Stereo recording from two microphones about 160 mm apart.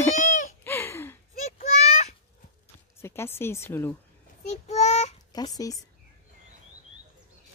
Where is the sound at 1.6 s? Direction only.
45° left (ahead or behind).